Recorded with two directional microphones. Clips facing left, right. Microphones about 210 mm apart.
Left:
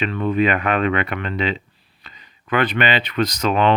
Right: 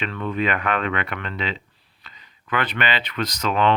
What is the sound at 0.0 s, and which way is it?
Speech, 15° left (ahead or behind).